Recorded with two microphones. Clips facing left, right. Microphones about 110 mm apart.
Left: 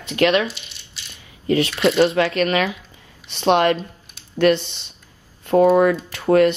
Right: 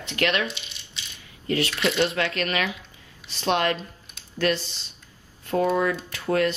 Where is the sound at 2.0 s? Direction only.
30° left (ahead or behind).